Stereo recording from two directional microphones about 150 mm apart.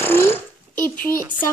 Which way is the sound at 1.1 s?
70° left (ahead or behind).